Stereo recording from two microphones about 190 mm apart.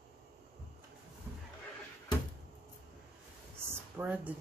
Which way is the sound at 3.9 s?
10° right (ahead or behind).